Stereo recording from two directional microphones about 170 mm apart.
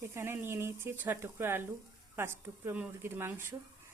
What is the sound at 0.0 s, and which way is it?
Speech, 15° right (ahead or behind).